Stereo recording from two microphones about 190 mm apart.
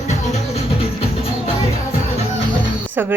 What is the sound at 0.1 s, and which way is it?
Music, 35° left (ahead or behind).